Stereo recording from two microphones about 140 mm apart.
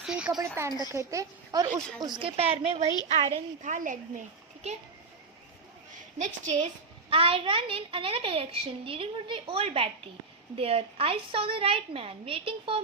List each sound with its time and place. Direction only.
0.0 s a sound: 5° right (ahead or behind)
0.3 s a woman's voice: 20° right (ahead or behind)
0.7 s a woman's voice: 25° left (ahead or behind)
0.9 s a woman's voice: 20° right (ahead or behind); by 3.2 s 45° right (ahead or behind)
3.6 s a woman's voice: 65° right (ahead or behind)
5.9 s a sound: 60° right (ahead or behind)
7.1 s a child's voice: 40° right (ahead or behind)